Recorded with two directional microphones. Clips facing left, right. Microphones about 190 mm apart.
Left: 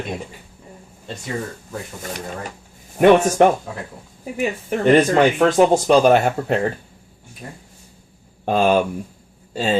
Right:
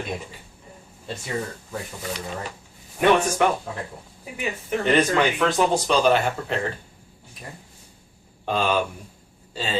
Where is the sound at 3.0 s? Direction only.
50° left (ahead or behind).